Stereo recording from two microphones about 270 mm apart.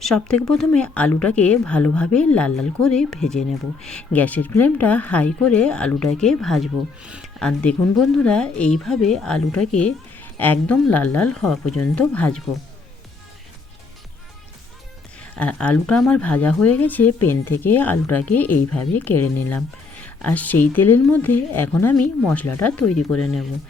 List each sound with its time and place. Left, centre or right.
0.0 s speech: centre
15.2 s speech: centre
22.8 s speech: left